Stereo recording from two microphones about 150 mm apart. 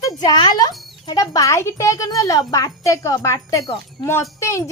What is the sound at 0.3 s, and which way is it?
Speech, 25° left (ahead or behind).